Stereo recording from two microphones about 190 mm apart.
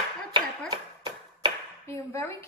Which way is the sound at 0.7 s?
25° right (ahead or behind).